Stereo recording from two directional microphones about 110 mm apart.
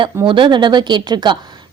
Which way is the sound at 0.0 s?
50° right (ahead or behind).